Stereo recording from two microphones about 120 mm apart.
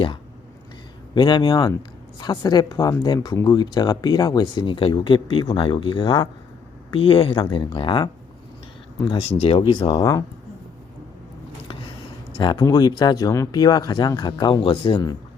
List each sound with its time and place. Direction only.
1.1 s speech: 40° left (ahead or behind)
9.4 s speech: 50° left (ahead or behind)
10.0 s speech: 30° left (ahead or behind)
12.4 s speech: 35° left (ahead or behind)